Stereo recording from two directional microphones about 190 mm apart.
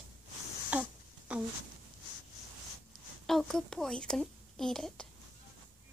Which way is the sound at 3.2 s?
Centre (ahead or behind).